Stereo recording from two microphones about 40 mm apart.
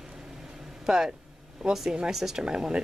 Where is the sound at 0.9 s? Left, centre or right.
Centre.